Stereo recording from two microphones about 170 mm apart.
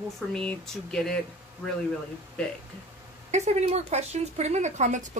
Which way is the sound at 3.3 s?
40° right (ahead or behind).